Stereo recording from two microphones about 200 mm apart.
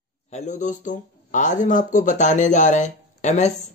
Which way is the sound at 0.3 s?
35° left (ahead or behind).